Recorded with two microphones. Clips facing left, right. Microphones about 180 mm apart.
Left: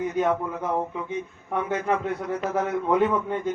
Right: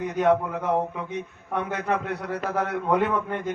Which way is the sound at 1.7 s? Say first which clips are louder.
Left 3 dB; 65° right (ahead or behind).